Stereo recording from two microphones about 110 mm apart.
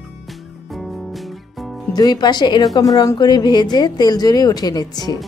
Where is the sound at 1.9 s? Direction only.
40° left (ahead or behind).